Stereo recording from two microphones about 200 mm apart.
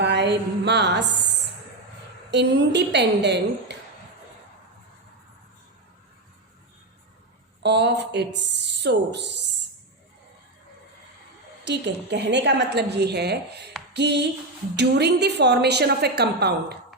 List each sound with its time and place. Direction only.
0.0 s a sound: 60° right (ahead or behind)
2.3 s a woman's voice: 60° right (ahead or behind)
7.6 s a woman's voice: 60° right (ahead or behind)
11.6 s a woman's voice: 60° right (ahead or behind)